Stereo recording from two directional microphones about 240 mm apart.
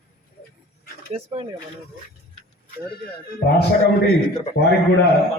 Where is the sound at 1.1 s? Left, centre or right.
Right.